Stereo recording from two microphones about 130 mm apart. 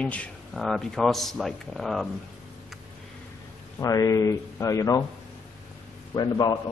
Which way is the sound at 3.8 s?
25° left (ahead or behind).